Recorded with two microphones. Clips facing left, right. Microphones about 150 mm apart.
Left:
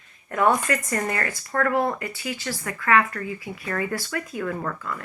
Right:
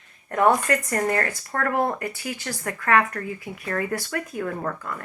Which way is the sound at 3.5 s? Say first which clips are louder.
Right 1 dB; 55° right (ahead or behind).